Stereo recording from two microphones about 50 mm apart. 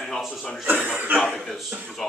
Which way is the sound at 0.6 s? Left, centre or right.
Right.